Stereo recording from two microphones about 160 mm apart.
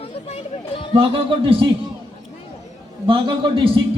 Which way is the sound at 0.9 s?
35° right (ahead or behind).